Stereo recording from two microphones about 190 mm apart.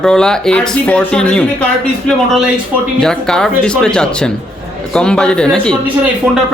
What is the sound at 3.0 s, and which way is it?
Speech, 5° left (ahead or behind).